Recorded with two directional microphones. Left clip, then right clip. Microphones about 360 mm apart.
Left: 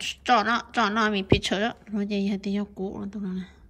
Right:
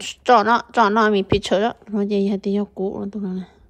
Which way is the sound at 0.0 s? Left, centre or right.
Centre.